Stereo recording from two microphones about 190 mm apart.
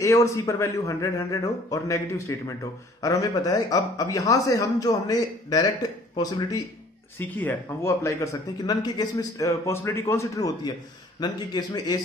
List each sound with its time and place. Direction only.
0.0 s a man's voice: 15° left (ahead or behind)
7.2 s a man's voice: 10° left (ahead or behind)